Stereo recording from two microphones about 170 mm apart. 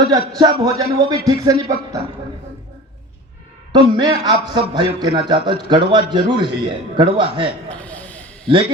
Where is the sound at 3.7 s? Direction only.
25° right (ahead or behind).